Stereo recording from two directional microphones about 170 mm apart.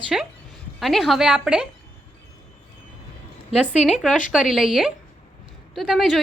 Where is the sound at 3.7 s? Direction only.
40° left (ahead or behind).